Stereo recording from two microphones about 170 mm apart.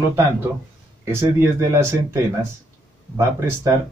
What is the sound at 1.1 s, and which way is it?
Speech, 15° right (ahead or behind).